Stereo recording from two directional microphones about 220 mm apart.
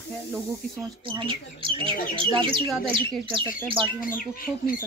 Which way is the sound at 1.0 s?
25° right (ahead or behind).